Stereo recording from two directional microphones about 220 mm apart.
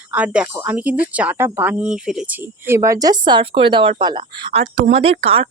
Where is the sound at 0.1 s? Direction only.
5° right (ahead or behind).